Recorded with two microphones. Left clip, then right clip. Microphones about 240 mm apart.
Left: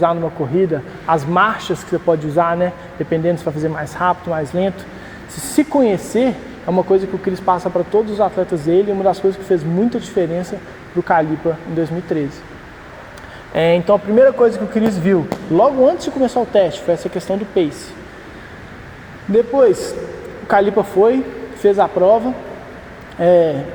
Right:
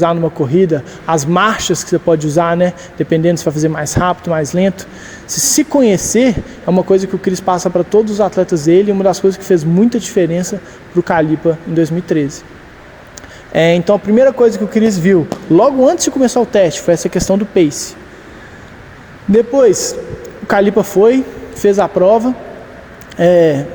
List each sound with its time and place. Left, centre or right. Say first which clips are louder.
0.0 s a man's voice: right 3 dB; right
5.3 s speech: right 16 dB; right
5.5 s speech: right 2 dB; right
13.5 s speech: right 3 dB; right
14.7 s speech: right 5 dB; centre
15.5 s speech: right 3 dB; right
19.3 s a man's voice: right 3 dB; right